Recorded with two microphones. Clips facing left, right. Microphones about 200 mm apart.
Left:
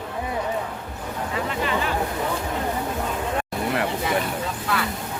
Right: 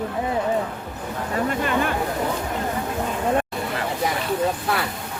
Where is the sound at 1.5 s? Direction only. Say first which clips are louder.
Right 3 dB; 50° right (ahead or behind).